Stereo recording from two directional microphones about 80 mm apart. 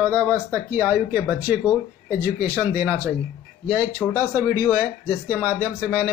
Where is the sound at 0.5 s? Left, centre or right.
Right.